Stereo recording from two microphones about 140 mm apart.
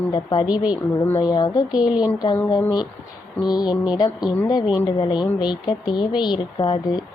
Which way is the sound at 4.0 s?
30° left (ahead or behind).